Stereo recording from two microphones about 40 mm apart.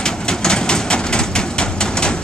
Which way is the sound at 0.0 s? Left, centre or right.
Centre.